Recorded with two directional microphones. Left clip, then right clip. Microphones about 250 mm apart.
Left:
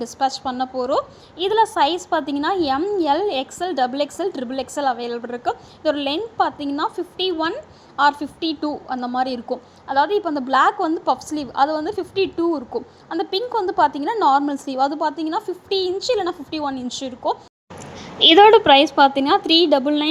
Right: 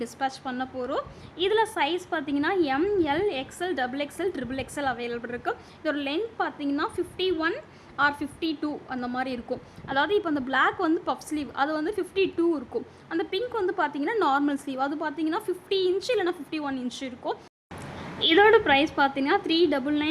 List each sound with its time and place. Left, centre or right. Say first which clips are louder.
0.0 s a woman's voice: left 8 dB; centre